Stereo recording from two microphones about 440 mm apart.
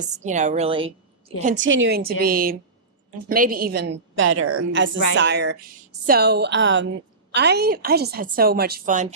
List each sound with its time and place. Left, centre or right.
0.0 s a woman's voice: centre